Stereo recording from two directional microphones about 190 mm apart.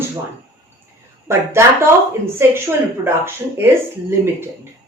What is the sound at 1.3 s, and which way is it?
Speech, 15° right (ahead or behind).